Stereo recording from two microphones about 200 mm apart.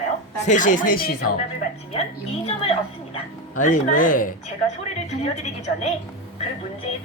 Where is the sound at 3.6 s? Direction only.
40° left (ahead or behind).